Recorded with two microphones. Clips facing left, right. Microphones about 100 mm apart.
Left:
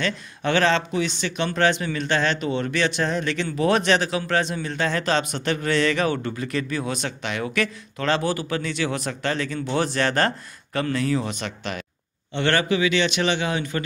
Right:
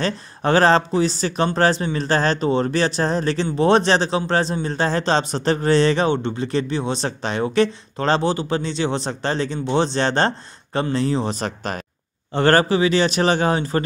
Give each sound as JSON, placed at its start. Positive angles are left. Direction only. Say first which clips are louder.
{"t": 0.0, "sound": "a man's voice", "louder": "right 3 dB", "side_deg": -35}